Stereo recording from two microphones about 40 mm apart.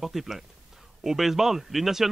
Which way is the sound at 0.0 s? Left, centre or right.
Centre.